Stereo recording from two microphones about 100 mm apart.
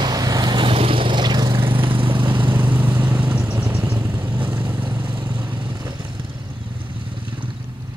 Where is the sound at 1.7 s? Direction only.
60° right (ahead or behind).